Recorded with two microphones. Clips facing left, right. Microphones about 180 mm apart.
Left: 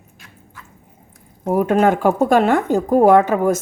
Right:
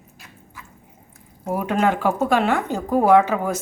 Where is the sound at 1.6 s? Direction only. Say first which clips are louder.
Left 6 dB; 45° left (ahead or behind).